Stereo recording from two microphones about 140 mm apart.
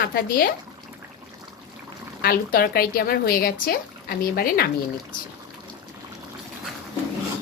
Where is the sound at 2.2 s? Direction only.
90° left.